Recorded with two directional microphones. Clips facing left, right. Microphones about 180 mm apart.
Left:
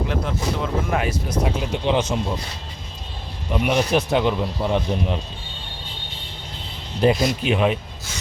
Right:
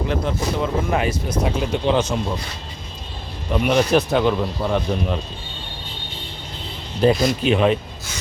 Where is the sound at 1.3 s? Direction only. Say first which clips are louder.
Right 2 dB; 15° left (ahead or behind).